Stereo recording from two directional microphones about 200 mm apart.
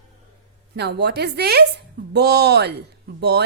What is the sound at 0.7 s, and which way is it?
A woman's voice, 55° right (ahead or behind).